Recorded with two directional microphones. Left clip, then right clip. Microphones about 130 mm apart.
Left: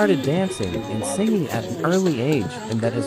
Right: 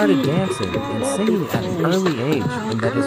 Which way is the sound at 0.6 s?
40° right (ahead or behind).